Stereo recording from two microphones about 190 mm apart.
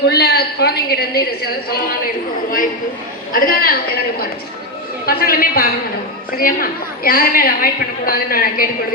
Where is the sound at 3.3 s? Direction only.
50° left (ahead or behind).